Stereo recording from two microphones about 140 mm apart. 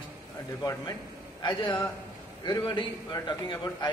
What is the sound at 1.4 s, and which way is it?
A man's voice, 35° left (ahead or behind).